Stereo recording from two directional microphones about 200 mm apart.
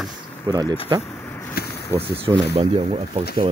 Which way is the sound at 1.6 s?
50° left (ahead or behind).